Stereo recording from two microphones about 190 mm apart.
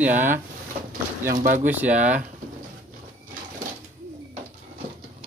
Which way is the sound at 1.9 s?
40° right (ahead or behind).